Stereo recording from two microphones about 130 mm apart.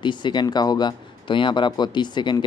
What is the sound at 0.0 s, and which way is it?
Speech, 35° left (ahead or behind).